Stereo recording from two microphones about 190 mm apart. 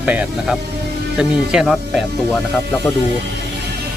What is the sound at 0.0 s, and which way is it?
Speech, 10° right (ahead or behind).